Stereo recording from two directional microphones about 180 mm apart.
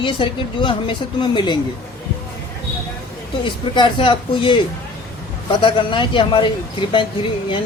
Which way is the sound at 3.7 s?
30° left (ahead or behind).